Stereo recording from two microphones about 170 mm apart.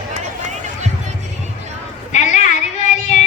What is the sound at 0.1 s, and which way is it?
Run, 45° right (ahead or behind).